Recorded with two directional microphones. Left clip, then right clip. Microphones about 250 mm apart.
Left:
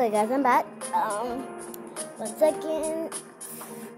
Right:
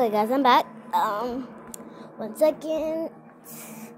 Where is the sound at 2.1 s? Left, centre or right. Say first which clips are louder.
Right 1 dB; centre.